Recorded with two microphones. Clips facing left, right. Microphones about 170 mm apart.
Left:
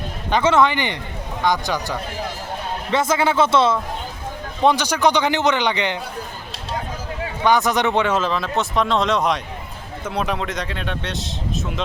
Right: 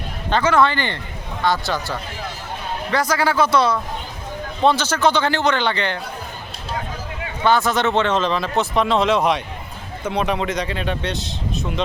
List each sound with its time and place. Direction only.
0.4 s a man's voice: 20° left (ahead or behind)
7.4 s speech: 15° left (ahead or behind); by 11.7 s centre (ahead or behind)